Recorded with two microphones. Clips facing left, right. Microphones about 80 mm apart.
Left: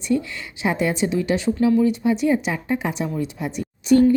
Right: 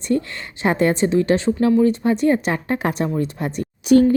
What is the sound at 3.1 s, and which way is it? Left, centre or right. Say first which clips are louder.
Speech: right 3 dB; right.